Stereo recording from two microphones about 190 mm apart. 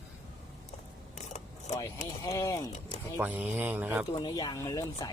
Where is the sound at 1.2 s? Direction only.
35° left (ahead or behind).